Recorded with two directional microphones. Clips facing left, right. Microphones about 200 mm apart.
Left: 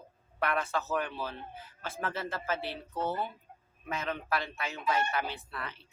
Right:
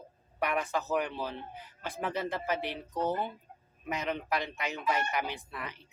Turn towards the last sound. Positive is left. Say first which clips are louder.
# right 1 dB
turn(degrees=-15)  # may be behind; listen again after turning